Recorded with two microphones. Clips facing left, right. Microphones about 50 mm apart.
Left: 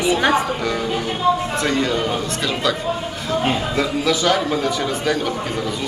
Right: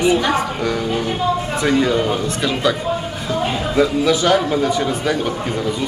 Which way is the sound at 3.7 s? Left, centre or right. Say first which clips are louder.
Right 4 dB; centre.